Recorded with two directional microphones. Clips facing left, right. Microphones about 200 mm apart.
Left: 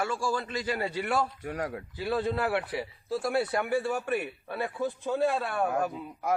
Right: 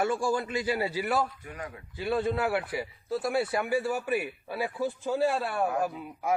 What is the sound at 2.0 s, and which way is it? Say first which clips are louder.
A man's voice: right 1 dB; centre (ahead or behind).